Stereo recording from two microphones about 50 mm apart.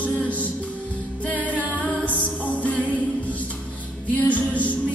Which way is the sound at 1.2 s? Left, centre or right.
Left.